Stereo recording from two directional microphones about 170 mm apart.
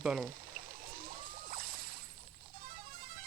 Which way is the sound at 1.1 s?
55° right (ahead or behind).